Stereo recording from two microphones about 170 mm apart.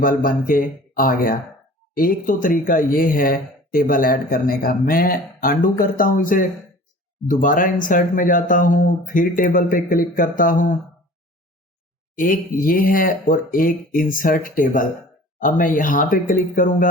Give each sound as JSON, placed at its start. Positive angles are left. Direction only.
{"t": 0.0, "sound": "speech", "side_deg": 50}
{"t": 12.1, "sound": "speech", "side_deg": 55}